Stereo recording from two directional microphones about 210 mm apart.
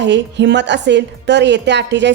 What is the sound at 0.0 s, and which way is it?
A woman's voice, 55° right (ahead or behind).